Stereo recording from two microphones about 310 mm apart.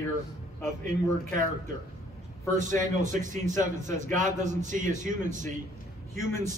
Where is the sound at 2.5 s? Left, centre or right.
Right.